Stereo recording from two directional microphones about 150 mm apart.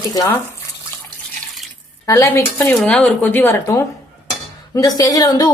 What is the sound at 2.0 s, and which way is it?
A woman's voice, 20° left (ahead or behind).